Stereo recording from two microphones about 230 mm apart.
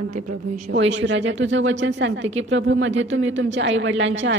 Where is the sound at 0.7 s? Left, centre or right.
Right.